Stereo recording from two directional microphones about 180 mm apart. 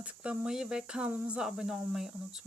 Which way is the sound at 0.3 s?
5° right (ahead or behind).